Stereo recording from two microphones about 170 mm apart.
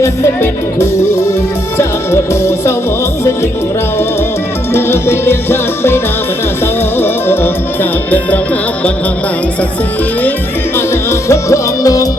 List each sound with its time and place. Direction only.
1.8 s music: 15° left (ahead or behind)
4.7 s music: 15° left (ahead or behind)
10.8 s music: 15° left (ahead or behind)